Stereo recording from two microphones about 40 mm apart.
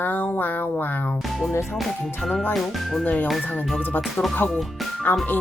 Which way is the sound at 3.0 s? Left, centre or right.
Left.